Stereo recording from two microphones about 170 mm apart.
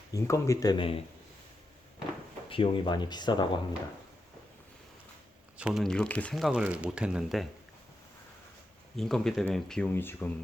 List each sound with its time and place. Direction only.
0.1 s speech: 20° left (ahead or behind)
2.5 s speech: 30° left (ahead or behind)
5.5 s speech: 5° right (ahead or behind)
9.0 s speech: centre (ahead or behind)